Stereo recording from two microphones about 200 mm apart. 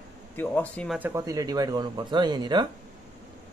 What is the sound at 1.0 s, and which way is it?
Speech, 15° right (ahead or behind).